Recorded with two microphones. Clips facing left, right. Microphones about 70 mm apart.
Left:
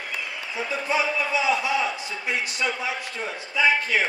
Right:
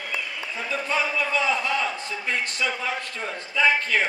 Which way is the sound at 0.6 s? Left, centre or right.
Centre.